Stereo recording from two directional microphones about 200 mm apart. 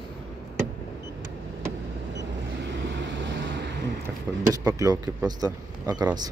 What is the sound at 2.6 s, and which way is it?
Vehicle, 65° right (ahead or behind).